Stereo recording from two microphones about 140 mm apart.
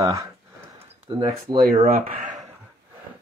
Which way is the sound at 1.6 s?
90° right.